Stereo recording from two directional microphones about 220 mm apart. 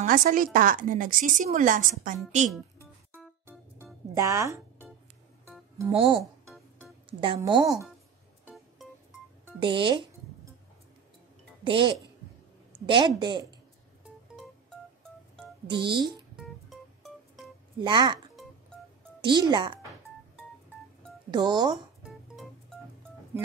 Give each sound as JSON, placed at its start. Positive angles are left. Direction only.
{"t": 0.0, "sound": "a woman's voice", "side_deg": -40}
{"t": 3.2, "sound": "music", "side_deg": -10}
{"t": 4.1, "sound": "speech", "side_deg": -15}
{"t": 5.9, "sound": "a woman's voice", "side_deg": -25}
{"t": 9.6, "sound": "music", "side_deg": -20}
{"t": 11.6, "sound": "a woman's voice", "side_deg": -20}
{"t": 15.6, "sound": "a woman's voice", "side_deg": -20}
{"t": 17.7, "sound": "a woman's voice", "side_deg": -20}
{"t": 19.2, "sound": "a woman's voice", "side_deg": -20}
{"t": 21.3, "sound": "a woman's voice", "side_deg": -20}